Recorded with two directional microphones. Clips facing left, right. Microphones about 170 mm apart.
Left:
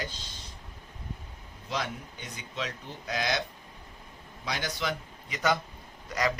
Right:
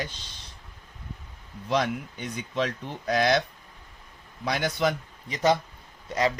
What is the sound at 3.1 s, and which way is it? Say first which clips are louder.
Speech: right 8 dB; 55° right (ahead or behind).